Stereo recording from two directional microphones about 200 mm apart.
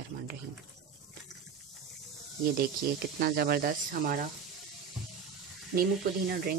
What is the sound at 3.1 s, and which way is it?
Speech, 50° right (ahead or behind).